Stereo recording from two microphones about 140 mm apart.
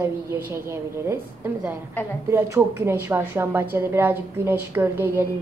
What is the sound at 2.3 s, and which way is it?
A woman's voice, 15° right (ahead or behind).